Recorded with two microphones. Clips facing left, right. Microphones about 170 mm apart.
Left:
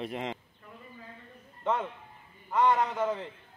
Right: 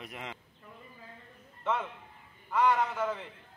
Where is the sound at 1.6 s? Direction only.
15° left (ahead or behind).